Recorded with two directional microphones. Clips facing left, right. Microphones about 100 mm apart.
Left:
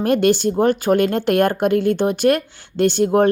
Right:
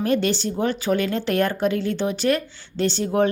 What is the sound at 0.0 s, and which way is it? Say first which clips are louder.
A woman's voice: left 6 dB; 55° left (ahead or behind).